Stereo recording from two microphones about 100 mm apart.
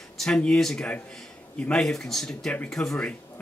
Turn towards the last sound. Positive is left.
turn(degrees=10)  # may be behind; listen again after turning